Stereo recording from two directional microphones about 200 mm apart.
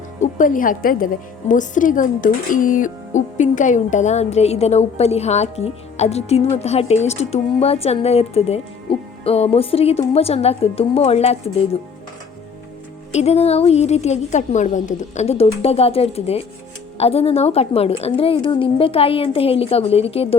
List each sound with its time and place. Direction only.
0.2 s a woman's voice: 40° left (ahead or behind)
13.1 s a woman's voice: 30° left (ahead or behind)